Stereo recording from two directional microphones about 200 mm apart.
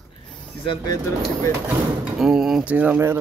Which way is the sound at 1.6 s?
5° right (ahead or behind).